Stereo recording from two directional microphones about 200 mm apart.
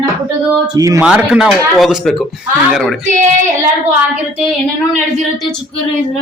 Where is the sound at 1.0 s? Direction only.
5° right (ahead or behind).